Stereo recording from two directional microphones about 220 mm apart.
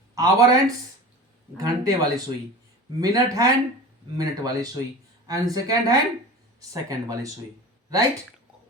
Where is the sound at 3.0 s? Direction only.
15° right (ahead or behind).